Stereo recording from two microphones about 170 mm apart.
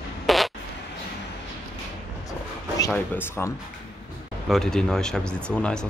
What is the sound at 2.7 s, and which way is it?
Speech, 15° left (ahead or behind).